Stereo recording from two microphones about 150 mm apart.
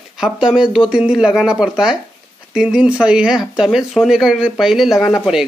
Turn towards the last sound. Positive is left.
turn(degrees=0)  # may be behind; listen again after turning